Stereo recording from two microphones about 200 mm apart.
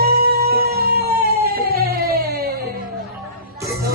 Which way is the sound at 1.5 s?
50° right (ahead or behind).